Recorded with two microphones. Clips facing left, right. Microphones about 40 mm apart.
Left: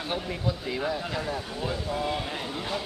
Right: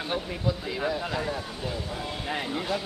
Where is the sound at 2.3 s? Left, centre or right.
Centre.